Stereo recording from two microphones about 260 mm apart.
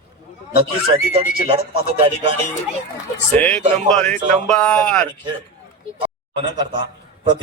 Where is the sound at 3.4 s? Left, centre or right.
Centre.